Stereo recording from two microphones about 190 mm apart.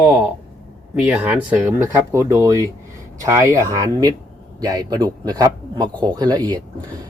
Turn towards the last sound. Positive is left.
turn(degrees=-20)  # may be behind; listen again after turning